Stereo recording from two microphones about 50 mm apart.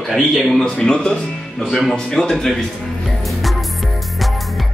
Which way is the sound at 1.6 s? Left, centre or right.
Centre.